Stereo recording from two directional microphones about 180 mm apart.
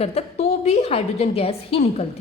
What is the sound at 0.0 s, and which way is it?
A woman's voice, 35° left (ahead or behind).